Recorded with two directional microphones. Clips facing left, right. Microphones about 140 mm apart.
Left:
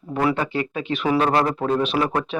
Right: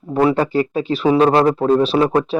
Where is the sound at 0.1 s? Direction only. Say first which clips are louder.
Right 6 dB; 30° right (ahead or behind).